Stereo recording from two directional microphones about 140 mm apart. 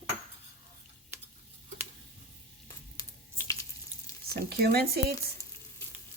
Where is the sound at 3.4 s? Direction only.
20° left (ahead or behind).